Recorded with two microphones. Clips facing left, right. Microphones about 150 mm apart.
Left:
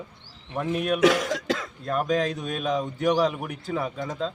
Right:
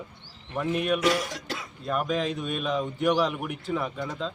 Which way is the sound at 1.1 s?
90° left.